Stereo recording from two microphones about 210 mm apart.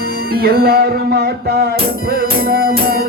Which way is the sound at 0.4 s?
45° right (ahead or behind).